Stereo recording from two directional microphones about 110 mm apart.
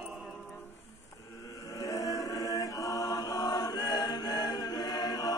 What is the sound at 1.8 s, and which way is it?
Chant, 30° left (ahead or behind).